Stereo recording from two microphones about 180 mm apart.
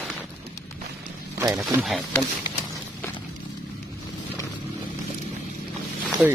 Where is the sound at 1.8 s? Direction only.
Centre (ahead or behind).